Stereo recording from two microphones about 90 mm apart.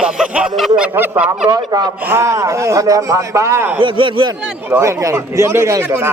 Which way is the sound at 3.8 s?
70° right (ahead or behind).